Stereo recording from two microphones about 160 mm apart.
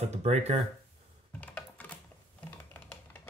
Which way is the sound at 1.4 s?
10° left (ahead or behind).